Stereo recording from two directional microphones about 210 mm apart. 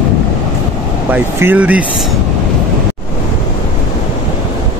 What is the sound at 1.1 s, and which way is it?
Speech, 10° right (ahead or behind).